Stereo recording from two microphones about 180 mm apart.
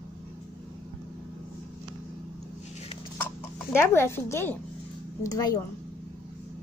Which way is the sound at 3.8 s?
15° left (ahead or behind).